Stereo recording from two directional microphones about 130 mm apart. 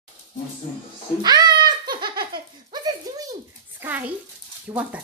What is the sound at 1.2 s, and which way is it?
Giggle, 35° right (ahead or behind).